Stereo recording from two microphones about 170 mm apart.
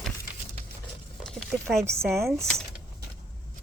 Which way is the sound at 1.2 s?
5° left (ahead or behind).